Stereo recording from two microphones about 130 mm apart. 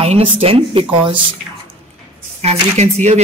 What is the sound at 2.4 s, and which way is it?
Speech, 55° right (ahead or behind).